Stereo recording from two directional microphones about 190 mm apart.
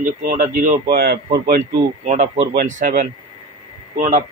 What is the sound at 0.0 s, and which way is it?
Speech, 45° right (ahead or behind).